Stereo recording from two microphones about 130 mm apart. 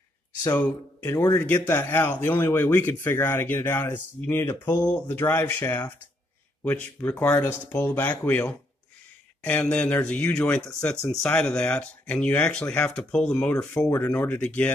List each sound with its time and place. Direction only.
0.6 s speech: 15° left (ahead or behind)